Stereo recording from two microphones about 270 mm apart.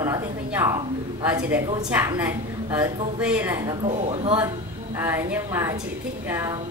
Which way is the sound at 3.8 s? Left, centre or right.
Right.